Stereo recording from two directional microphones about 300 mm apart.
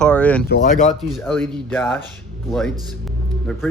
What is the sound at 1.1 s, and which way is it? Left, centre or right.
Speech, centre.